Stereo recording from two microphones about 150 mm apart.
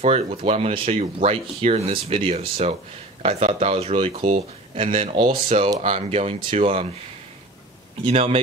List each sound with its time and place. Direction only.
0.0 s speech: 45° right (ahead or behind)
8.0 s speech: 40° right (ahead or behind)